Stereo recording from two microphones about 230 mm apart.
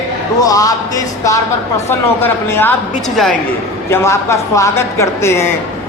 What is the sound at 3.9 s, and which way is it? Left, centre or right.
Speech, centre.